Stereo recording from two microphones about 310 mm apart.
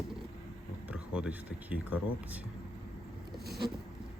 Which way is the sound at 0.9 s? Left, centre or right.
Centre.